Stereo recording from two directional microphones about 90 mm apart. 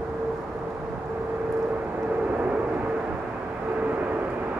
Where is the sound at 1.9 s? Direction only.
15° right (ahead or behind).